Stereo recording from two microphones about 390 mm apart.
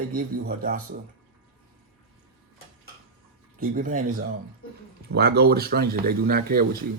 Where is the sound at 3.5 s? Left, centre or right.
Right.